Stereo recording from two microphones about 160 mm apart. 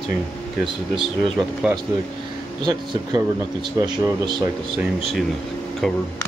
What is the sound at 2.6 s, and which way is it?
Speech, 25° right (ahead or behind).